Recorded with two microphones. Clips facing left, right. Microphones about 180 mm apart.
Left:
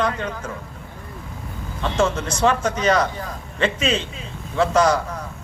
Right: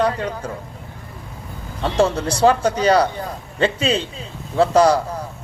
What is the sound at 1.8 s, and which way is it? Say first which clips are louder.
A man's voice: right 3 dB; 35° right (ahead or behind).